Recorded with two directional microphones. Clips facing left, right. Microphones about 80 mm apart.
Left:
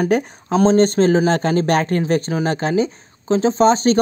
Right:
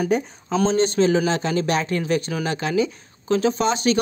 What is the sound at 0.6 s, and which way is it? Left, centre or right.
A woman's voice, left.